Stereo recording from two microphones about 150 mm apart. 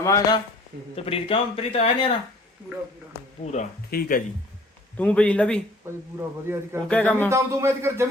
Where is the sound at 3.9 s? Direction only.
75° left (ahead or behind).